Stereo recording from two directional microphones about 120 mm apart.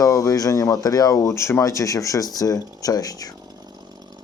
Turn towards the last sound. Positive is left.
turn(degrees=30)  # may be behind; listen again after turning